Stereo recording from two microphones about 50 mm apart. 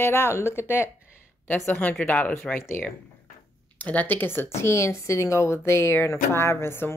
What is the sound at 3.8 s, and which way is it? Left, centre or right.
Speech, left.